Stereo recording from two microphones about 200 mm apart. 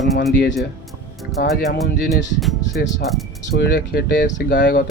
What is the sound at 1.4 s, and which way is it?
Speech, 55° left (ahead or behind).